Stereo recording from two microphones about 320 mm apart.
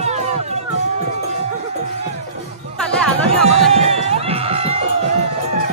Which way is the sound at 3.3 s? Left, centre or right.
Centre.